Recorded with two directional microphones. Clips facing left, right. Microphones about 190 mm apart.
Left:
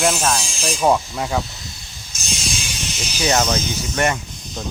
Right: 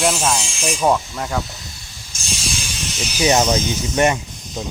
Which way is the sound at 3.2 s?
15° right (ahead or behind).